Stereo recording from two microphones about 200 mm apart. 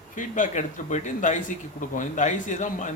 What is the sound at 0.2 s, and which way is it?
A man's voice, 40° left (ahead or behind).